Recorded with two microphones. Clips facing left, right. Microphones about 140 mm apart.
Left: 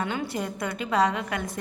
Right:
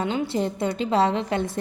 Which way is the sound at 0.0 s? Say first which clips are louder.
Right 5 dB; 25° right (ahead or behind).